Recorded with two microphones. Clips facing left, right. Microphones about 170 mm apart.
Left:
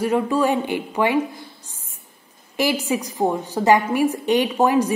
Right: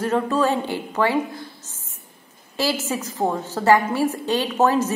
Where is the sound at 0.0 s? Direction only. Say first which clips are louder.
Left 1 dB; 10° left (ahead or behind).